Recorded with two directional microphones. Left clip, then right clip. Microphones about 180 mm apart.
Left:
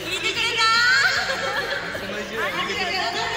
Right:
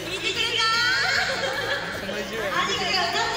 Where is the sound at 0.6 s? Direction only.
10° left (ahead or behind).